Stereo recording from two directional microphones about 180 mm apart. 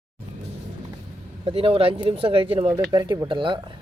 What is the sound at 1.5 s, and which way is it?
Speech, 30° right (ahead or behind).